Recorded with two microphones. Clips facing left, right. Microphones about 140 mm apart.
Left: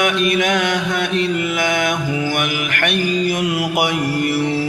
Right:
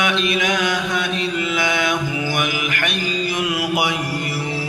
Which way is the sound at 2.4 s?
60° left (ahead or behind).